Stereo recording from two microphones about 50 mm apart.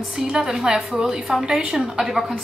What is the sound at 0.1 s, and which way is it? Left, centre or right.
A woman's voice, centre.